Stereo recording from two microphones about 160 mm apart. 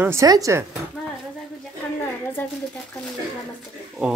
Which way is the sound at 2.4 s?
10° left (ahead or behind).